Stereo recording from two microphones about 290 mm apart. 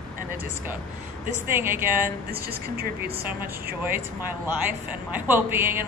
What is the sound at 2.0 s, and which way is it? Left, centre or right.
Speech, right.